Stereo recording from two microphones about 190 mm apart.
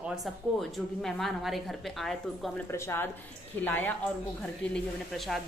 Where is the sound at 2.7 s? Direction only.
15° left (ahead or behind).